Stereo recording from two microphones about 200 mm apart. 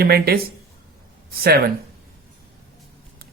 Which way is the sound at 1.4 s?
50° right (ahead or behind).